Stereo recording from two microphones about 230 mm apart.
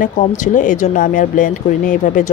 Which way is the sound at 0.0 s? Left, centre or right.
Left.